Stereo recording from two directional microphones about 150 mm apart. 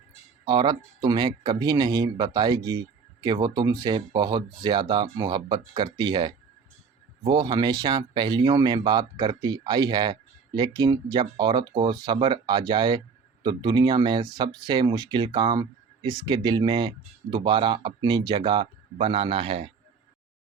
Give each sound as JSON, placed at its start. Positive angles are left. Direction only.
{"t": 0.4, "sound": "speech", "side_deg": -30}